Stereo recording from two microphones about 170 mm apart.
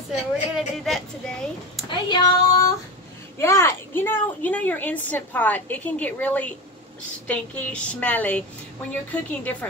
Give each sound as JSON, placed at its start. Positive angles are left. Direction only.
{"t": 0.6, "sound": "speech", "side_deg": 0}
{"t": 1.9, "sound": "child singing", "side_deg": 25}
{"t": 3.3, "sound": "a woman's voice", "side_deg": 15}